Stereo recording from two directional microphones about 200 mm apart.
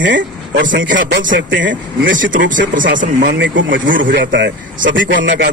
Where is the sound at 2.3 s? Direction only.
40° right (ahead or behind).